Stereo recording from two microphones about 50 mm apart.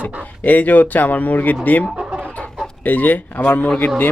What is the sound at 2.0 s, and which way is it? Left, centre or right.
Chicken, right.